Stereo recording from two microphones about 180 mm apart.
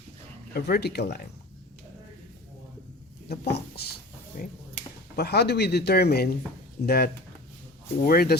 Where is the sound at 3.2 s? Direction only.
65° left (ahead or behind).